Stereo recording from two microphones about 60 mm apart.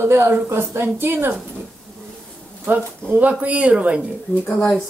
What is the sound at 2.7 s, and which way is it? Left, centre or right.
Speech, right.